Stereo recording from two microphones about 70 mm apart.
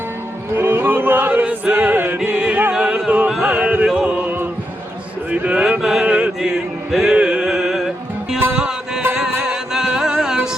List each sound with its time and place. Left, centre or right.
0.5 s a sound: right
2.1 s music: centre
5.3 s speech: centre
5.8 s chant: centre
6.1 s chant: centre
6.9 s music: centre
7.2 s music: centre